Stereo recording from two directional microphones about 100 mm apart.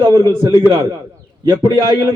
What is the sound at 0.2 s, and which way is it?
Speech, 40° right (ahead or behind).